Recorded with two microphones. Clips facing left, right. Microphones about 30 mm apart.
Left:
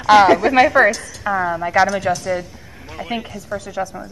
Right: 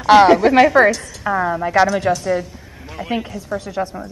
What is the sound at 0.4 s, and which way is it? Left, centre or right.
A woman's voice, centre.